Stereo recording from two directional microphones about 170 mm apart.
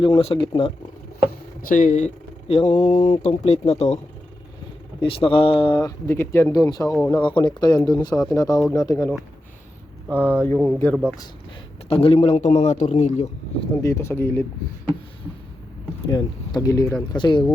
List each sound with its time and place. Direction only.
0.0 s a man's voice: 30° left (ahead or behind)
1.3 s speech: 55° left (ahead or behind)
4.9 s a man's voice: 30° left (ahead or behind)
6.1 s speech: 15° left (ahead or behind)
7.2 s speech: 30° left (ahead or behind)
10.2 s speech: 10° left (ahead or behind)
11.9 s a man's voice: 35° left (ahead or behind)
13.8 s speech: 15° left (ahead or behind)
16.0 s speech: 20° left (ahead or behind)